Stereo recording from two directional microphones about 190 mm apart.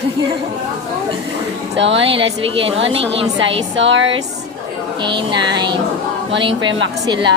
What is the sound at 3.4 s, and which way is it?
Speech, 80° right.